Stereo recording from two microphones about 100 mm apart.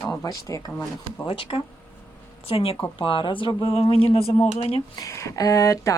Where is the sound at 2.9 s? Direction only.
55° left (ahead or behind); by 4.8 s 90° left.